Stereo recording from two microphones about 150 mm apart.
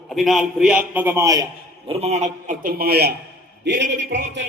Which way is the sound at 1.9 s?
45° right (ahead or behind).